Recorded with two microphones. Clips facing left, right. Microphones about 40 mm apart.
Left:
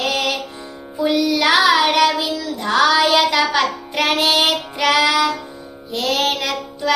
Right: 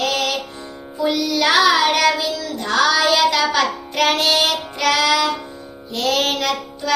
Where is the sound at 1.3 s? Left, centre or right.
Centre.